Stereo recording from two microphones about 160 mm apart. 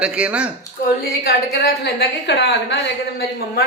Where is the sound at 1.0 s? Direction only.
70° left (ahead or behind); by 3.6 s 90° left.